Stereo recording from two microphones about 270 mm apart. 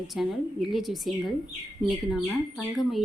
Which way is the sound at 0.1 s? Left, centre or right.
Centre.